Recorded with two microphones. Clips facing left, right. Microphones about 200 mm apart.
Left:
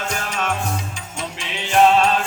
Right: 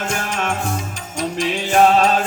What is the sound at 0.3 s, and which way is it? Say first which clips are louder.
Music: right 2 dB; 50° right (ahead or behind).